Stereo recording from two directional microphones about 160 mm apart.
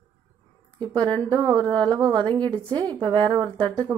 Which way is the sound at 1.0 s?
30° right (ahead or behind).